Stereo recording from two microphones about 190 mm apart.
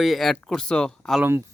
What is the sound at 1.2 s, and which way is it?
Speech, 10° right (ahead or behind).